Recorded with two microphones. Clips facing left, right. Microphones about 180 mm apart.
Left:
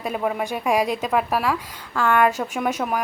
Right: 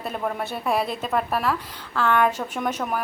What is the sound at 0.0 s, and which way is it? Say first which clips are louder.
Speech: left 3 dB; 10° left (ahead or behind).